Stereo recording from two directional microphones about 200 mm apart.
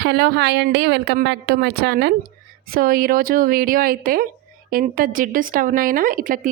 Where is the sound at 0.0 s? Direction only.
55° right (ahead or behind).